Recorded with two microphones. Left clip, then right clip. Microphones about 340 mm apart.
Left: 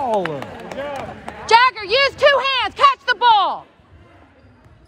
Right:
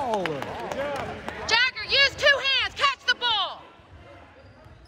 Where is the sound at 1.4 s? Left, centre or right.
Centre.